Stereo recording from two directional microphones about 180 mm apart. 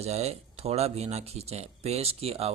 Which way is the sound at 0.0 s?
35° right (ahead or behind).